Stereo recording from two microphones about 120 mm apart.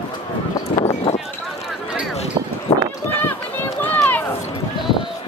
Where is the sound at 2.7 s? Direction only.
50° left (ahead or behind).